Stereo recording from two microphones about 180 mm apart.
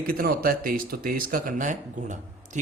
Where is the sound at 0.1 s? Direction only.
55° right (ahead or behind).